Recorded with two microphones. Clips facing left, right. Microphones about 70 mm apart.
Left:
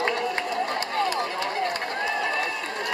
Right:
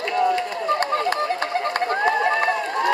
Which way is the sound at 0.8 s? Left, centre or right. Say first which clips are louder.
Right 4 dB; right.